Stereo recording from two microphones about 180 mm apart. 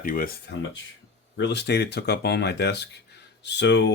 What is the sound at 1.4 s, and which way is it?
Speech, 70° left (ahead or behind).